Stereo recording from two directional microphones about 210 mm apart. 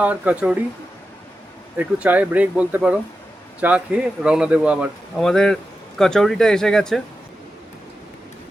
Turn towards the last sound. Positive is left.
turn(degrees=0)  # may be behind; listen again after turning